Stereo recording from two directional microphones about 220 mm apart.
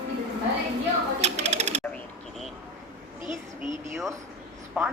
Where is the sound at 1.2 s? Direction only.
30° right (ahead or behind).